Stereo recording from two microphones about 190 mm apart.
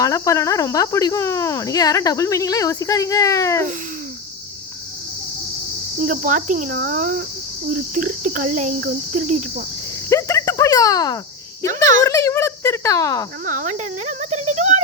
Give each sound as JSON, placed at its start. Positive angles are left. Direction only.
{"t": 0.0, "sound": "speech", "side_deg": 15}
{"t": 6.0, "sound": "cricket", "side_deg": -45}
{"t": 9.1, "sound": "speech", "side_deg": -40}
{"t": 10.1, "sound": "cricket", "side_deg": 15}
{"t": 12.0, "sound": "speech", "side_deg": 15}
{"t": 13.4, "sound": "speech", "side_deg": -40}